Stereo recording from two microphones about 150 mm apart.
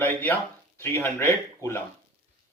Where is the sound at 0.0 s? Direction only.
10° left (ahead or behind).